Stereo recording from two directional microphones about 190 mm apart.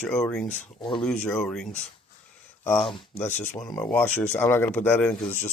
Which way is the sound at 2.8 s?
25° left (ahead or behind).